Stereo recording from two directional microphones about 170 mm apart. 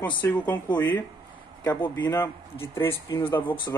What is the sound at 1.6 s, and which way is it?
Speech, 10° left (ahead or behind).